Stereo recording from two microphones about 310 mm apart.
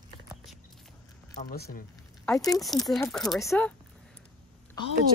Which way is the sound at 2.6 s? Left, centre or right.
Centre.